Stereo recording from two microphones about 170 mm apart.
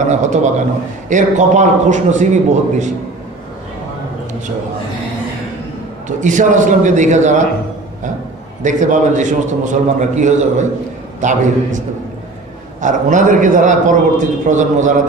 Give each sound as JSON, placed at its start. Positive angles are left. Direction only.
{"t": 0.0, "sound": "a man's voice", "side_deg": -45}
{"t": 6.0, "sound": "a man's voice", "side_deg": -45}
{"t": 8.6, "sound": "a man's voice", "side_deg": -45}
{"t": 12.8, "sound": "a man's voice", "side_deg": -50}